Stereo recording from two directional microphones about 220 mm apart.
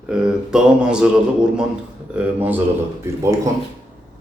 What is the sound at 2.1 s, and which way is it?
Speech, 10° right (ahead or behind).